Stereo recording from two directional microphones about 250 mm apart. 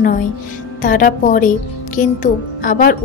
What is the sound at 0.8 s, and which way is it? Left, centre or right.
A woman's voice, left.